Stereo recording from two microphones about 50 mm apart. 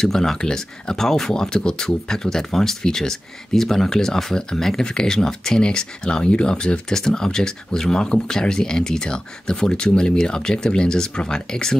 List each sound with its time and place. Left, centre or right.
0.0 s speech: centre